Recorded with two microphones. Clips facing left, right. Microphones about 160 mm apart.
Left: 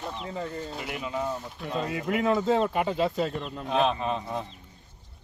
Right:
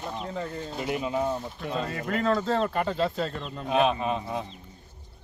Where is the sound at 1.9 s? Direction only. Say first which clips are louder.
Left 1 dB; 15° left (ahead or behind).